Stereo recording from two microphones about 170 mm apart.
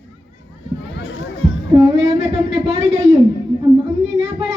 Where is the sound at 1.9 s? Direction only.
35° right (ahead or behind).